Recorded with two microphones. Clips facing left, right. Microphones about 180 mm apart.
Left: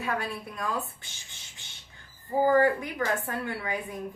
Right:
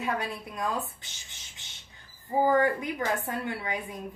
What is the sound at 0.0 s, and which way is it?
Speech, 20° right (ahead or behind).